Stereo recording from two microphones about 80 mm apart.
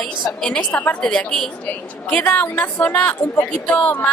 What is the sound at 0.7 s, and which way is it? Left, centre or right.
A woman's voice, left.